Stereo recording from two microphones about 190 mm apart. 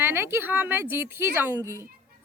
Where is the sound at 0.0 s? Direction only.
10° right (ahead or behind).